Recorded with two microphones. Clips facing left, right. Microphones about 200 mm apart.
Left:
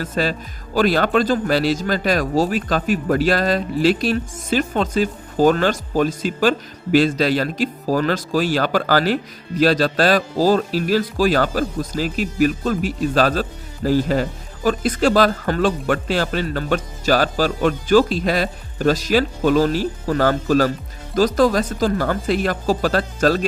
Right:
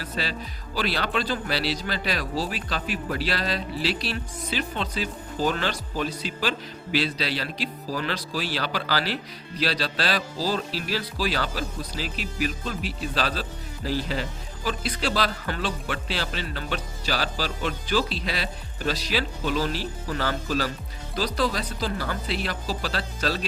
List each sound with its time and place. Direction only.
0.0 s speech: 45° left (ahead or behind)